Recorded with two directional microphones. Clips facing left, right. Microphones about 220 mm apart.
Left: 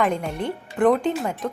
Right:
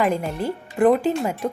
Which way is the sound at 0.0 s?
5° right (ahead or behind).